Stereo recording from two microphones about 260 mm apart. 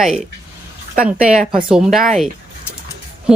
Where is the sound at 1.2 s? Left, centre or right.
Centre.